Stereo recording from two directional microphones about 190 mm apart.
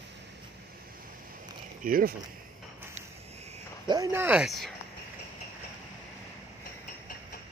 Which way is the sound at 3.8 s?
20° right (ahead or behind).